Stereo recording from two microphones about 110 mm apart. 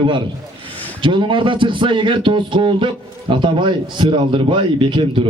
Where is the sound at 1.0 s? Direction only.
50° right (ahead or behind).